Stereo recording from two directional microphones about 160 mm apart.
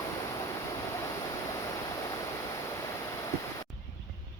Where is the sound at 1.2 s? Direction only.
20° left (ahead or behind).